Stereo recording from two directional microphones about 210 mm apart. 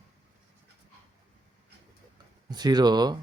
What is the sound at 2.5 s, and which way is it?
Speech, 20° right (ahead or behind).